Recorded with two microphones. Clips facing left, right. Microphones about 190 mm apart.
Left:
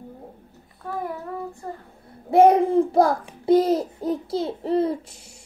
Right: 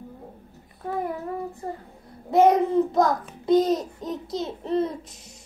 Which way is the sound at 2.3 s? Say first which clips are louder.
Left 3 dB; 30° left (ahead or behind).